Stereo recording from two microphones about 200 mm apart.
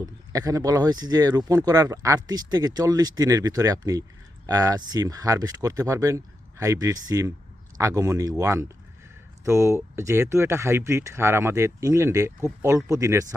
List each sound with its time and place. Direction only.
0.0 s speech: 15° right (ahead or behind)